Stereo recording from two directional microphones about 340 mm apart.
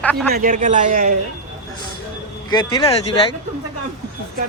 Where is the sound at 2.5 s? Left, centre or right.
Centre.